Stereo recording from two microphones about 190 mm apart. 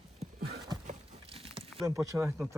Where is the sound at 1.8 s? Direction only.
15° right (ahead or behind).